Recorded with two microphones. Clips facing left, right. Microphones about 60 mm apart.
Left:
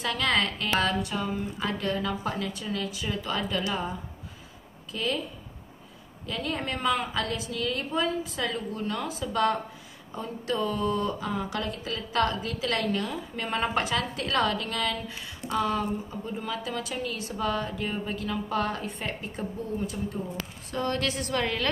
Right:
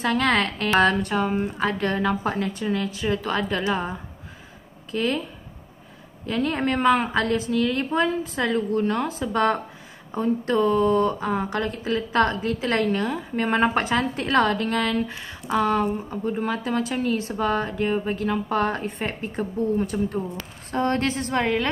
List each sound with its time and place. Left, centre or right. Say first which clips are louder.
0.0 s speech: right 5 dB; right
4.9 s speech: right 6 dB; right
6.2 s speech: right 8 dB; right
19.8 s speech: right 7 dB; right
20.7 s speech: right 6 dB; right